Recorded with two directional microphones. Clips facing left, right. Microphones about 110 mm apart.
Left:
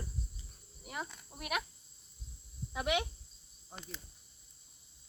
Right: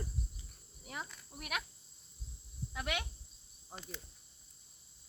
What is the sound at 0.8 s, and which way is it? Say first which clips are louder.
Speech: left 3 dB; 5° left (ahead or behind).